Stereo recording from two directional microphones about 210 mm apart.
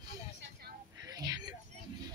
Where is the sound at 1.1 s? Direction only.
20° right (ahead or behind).